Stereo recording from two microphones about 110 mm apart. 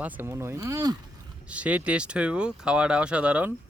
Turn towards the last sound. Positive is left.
turn(degrees=-10)  # may be behind; listen again after turning